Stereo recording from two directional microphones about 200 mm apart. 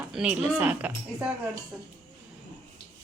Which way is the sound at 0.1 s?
5° right (ahead or behind).